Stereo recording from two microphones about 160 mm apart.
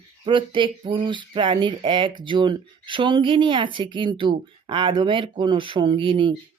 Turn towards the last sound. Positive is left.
turn(degrees=-30)  # may be behind; listen again after turning